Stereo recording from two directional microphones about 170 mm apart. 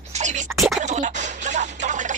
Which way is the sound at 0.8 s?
45° right (ahead or behind).